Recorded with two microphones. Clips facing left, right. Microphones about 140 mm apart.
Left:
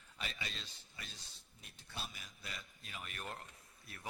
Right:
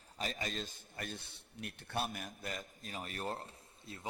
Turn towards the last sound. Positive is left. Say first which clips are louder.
# right 6 dB
turn(degrees=-30)  # may be behind; listen again after turning